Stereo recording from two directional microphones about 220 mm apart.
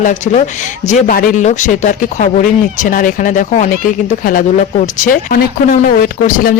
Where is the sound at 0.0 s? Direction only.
35° left (ahead or behind).